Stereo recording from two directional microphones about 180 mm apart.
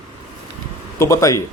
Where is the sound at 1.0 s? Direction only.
15° left (ahead or behind).